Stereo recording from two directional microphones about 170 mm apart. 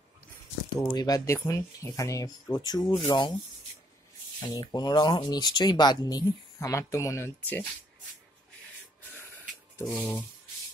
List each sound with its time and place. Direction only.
0.7 s speech: 20° left (ahead or behind)
4.4 s speech: 25° left (ahead or behind)
9.8 s speech: 10° left (ahead or behind)